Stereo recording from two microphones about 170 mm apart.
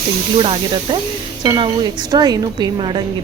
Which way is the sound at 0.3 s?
30° right (ahead or behind).